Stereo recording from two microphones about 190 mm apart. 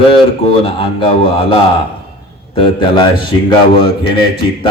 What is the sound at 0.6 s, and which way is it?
A man's voice, 30° left (ahead or behind).